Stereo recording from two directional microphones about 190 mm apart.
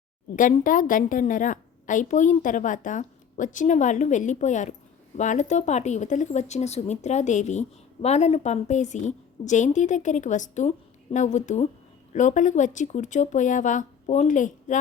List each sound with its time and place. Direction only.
0.3 s a woman's voice: 45° left (ahead or behind)